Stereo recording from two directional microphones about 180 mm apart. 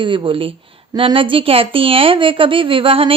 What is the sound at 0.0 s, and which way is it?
A woman's voice, 25° right (ahead or behind).